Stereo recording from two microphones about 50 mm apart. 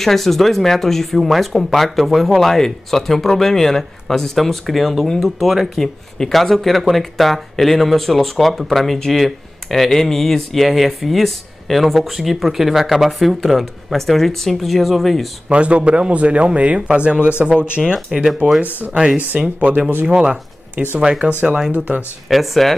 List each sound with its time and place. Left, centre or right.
0.0 s speech: centre
15.4 s speech: right
18.4 s speech: right
19.6 s speech: right
21.7 s speech: right
22.3 s speech: centre